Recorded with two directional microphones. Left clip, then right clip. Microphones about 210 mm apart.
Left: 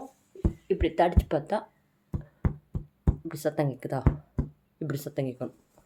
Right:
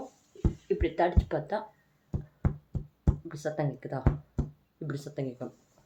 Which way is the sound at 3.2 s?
45° left (ahead or behind).